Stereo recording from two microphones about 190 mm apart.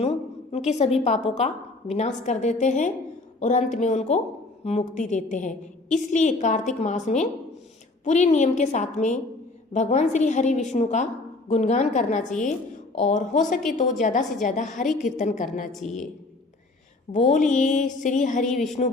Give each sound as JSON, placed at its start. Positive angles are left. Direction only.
{"t": 0.0, "sound": "a sound", "side_deg": 35}
{"t": 1.0, "sound": "a woman's voice", "side_deg": 35}
{"t": 17.1, "sound": "a woman's voice", "side_deg": 40}
{"t": 18.4, "sound": "a woman's voice", "side_deg": 0}